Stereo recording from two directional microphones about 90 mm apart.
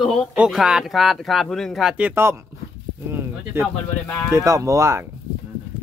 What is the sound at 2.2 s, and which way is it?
Speech, 25° right (ahead or behind).